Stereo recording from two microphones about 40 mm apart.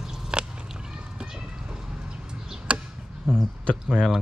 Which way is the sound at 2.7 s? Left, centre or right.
Right.